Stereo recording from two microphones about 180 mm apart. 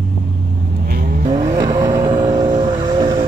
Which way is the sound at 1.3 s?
20° right (ahead or behind).